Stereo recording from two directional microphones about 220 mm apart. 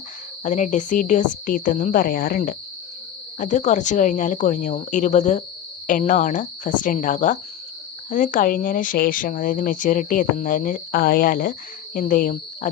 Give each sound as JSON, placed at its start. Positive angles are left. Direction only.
{"t": 0.4, "sound": "speech", "side_deg": 35}